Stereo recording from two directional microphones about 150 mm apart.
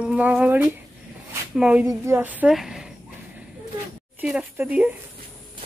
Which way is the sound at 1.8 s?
15° right (ahead or behind).